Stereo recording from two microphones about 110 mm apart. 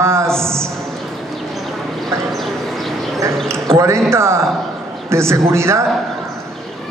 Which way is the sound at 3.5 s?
25° right (ahead or behind).